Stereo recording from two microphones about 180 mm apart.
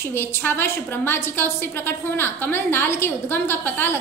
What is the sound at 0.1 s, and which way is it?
A woman's voice, 10° left (ahead or behind).